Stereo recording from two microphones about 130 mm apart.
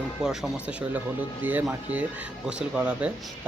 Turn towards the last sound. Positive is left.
turn(degrees=-10)  # may be behind; listen again after turning